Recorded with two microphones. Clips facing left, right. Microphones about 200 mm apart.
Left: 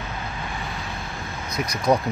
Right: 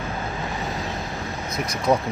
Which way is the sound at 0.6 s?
40° right (ahead or behind).